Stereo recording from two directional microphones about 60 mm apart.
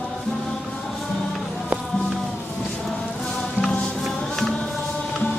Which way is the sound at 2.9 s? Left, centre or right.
Centre.